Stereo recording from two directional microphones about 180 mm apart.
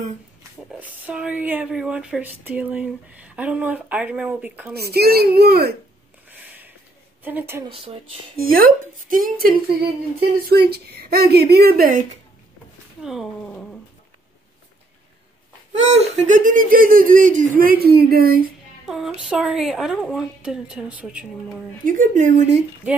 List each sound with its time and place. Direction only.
0.7 s speech: 10° right (ahead or behind)
4.7 s speech: 60° right (ahead or behind)
6.3 s a sound: 10° right (ahead or behind)
7.2 s speech: 10° right (ahead or behind)
7.6 s speech: 30° right (ahead or behind)
8.4 s speech: 55° right (ahead or behind)
10.7 s speech: 60° right (ahead or behind)
13.0 s a woman's voice: centre (ahead or behind)
15.7 s speech: 40° right (ahead or behind); by 18.5 s 55° right (ahead or behind)
18.9 s a woman's voice: centre (ahead or behind)
21.8 s speech: 45° right (ahead or behind)